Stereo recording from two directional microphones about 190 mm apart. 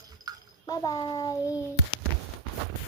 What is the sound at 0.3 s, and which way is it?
Bathtub, 20° right (ahead or behind).